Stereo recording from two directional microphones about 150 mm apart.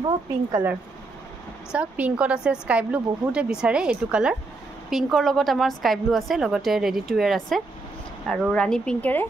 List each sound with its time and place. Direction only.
0.0 s speech: 25° right (ahead or behind)
1.7 s a woman's voice: 10° right (ahead or behind); by 9.2 s 5° left (ahead or behind)